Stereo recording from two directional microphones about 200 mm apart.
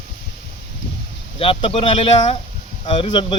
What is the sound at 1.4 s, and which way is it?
Speech, 30° left (ahead or behind).